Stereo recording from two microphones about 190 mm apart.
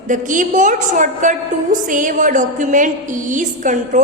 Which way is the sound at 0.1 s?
45° right (ahead or behind).